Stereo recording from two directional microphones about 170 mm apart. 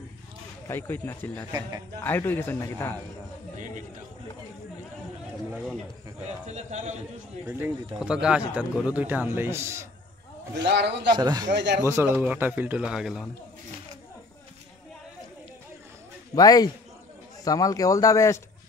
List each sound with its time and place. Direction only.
0.7 s a man's voice: 10° left (ahead or behind)
6.2 s speech: 45° right (ahead or behind)
7.4 s speech: 10° right (ahead or behind)
10.6 s a man's voice: 85° right
11.1 s speech: 25° right (ahead or behind)
11.5 s speech: 90° right
11.8 s speech: 15° right (ahead or behind)
16.3 s speech: 20° left (ahead or behind)